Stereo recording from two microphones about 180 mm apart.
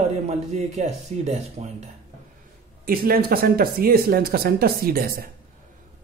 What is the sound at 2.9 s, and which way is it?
Speech, 55° right (ahead or behind).